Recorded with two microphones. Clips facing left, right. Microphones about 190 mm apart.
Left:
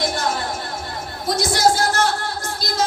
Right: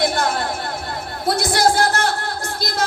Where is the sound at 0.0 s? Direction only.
60° right (ahead or behind).